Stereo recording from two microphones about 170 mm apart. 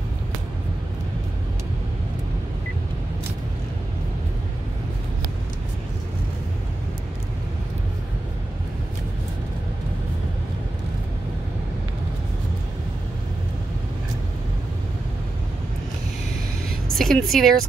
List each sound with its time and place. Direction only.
16.9 s speech: centre (ahead or behind)